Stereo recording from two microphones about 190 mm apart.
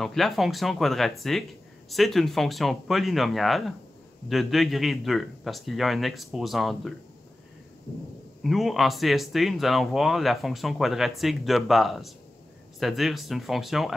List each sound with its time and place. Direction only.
0.0 s speech: centre (ahead or behind)
8.5 s speech: centre (ahead or behind)